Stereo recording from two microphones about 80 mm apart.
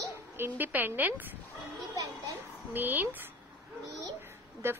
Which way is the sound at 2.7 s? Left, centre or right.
Right.